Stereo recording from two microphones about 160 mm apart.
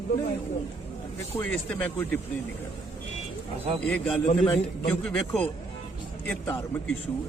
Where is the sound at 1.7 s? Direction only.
10° left (ahead or behind).